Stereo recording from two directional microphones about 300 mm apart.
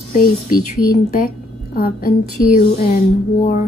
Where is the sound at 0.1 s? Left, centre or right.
Left.